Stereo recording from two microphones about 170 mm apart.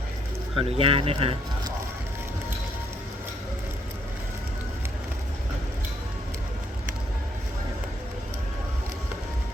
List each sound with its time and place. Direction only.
0.5 s speech: 35° right (ahead or behind)